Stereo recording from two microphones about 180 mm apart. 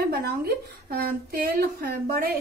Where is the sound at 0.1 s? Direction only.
60° right (ahead or behind).